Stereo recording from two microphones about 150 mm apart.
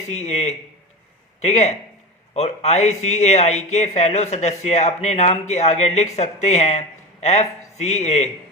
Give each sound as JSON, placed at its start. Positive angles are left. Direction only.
{"t": 0.1, "sound": "speech", "side_deg": 45}